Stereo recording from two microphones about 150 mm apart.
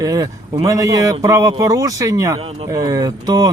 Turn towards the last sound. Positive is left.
turn(degrees=-25)  # may be behind; listen again after turning